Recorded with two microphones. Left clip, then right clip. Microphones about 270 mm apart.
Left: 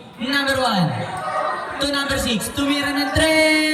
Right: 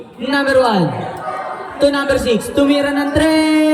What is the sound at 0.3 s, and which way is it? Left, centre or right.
Speech, right.